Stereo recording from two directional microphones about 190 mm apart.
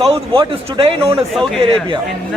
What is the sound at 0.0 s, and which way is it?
Speech, 30° right (ahead or behind).